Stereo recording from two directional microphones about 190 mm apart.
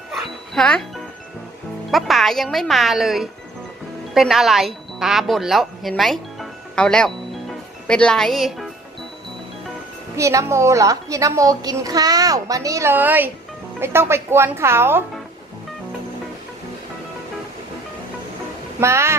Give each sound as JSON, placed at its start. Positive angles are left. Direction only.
{"t": 0.1, "sound": "music", "side_deg": 0}
{"t": 1.9, "sound": "a woman's voice", "side_deg": 0}
{"t": 10.2, "sound": "a woman's voice", "side_deg": -15}
{"t": 18.8, "sound": "a woman's voice", "side_deg": -15}